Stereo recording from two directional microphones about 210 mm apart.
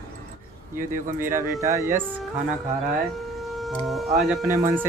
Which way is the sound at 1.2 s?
15° right (ahead or behind).